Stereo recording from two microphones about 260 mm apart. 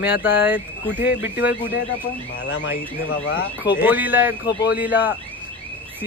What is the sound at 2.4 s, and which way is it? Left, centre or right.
Speech, left.